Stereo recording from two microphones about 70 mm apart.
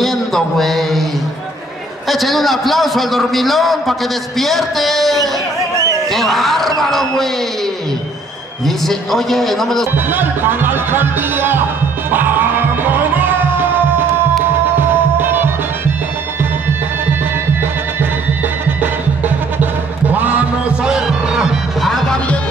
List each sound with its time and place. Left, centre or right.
0.0 s a sound: centre
2.0 s a man's voice: centre
8.6 s a man's voice: centre
9.9 s speech: right
12.1 s music: right
14.8 s music: right
18.8 s music: right
20.8 s music: centre
21.8 s music: centre